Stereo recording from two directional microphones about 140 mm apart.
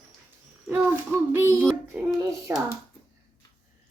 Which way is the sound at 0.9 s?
15° right (ahead or behind).